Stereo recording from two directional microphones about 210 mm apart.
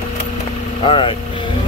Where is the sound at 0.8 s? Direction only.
25° left (ahead or behind).